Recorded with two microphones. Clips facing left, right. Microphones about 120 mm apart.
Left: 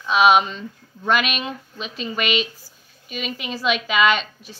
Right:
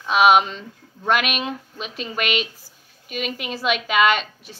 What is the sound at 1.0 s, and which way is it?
A woman's voice, 60° right (ahead or behind).